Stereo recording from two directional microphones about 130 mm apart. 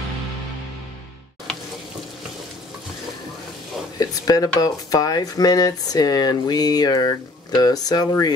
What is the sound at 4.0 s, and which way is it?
Speech, 30° left (ahead or behind).